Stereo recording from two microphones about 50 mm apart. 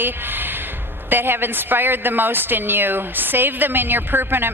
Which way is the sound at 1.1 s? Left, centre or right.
Right.